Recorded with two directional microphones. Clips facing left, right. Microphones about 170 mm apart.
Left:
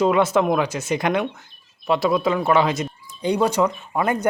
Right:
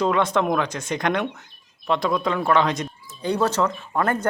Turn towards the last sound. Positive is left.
turn(degrees=10)  # may be behind; listen again after turning